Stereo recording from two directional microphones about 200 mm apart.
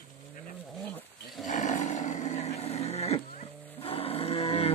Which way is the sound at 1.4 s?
40° left (ahead or behind).